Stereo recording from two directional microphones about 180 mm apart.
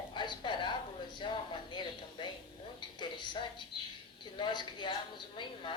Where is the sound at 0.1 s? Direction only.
25° left (ahead or behind).